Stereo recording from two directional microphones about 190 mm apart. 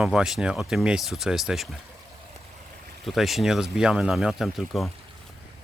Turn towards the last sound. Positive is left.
turn(degrees=0)  # may be behind; listen again after turning